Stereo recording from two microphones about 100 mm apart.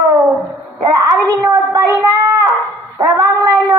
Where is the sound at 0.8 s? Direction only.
35° right (ahead or behind).